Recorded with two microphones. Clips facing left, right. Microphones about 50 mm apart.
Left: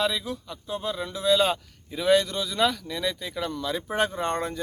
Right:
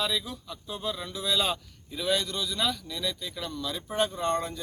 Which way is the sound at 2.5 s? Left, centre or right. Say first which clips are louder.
Left 8 dB; left.